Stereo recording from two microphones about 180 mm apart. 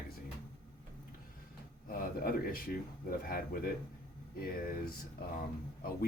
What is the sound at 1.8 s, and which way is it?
Speech, 55° left (ahead or behind).